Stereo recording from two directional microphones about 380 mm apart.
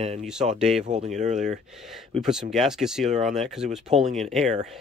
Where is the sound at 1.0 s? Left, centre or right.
Centre.